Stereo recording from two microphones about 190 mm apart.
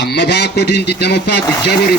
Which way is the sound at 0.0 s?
65° left (ahead or behind).